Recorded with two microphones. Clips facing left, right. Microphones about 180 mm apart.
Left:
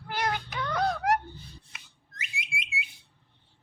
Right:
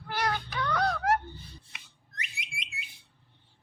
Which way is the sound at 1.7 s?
Centre (ahead or behind).